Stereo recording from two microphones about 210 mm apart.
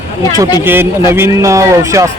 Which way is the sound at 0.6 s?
10° right (ahead or behind).